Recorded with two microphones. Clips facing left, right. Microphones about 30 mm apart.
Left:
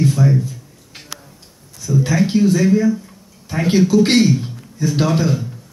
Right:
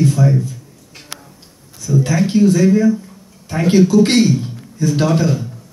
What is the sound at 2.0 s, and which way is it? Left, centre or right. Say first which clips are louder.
A man's voice: right 1 dB; centre.